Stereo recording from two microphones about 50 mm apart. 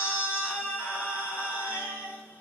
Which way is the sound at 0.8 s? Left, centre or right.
Left.